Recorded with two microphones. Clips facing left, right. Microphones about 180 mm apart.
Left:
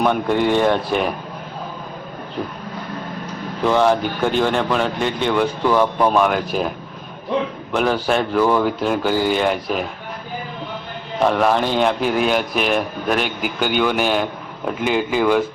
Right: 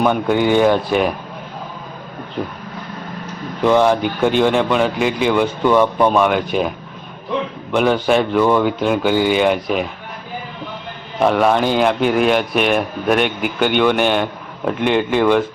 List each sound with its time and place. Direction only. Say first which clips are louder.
0.0 s speech: right 2 dB; centre (ahead or behind)
3.6 s speech: right 3 dB; centre (ahead or behind)
7.7 s speech: right 4 dB; centre (ahead or behind)
11.2 s speech: right 2 dB; centre (ahead or behind)